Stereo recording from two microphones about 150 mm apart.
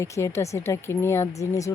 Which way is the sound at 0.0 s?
20° left (ahead or behind).